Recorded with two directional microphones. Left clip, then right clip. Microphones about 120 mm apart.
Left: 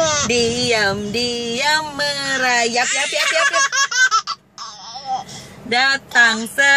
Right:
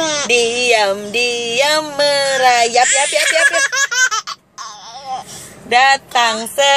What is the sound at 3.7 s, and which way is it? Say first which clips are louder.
Baby laughter: right 1 dB; 15° left (ahead or behind).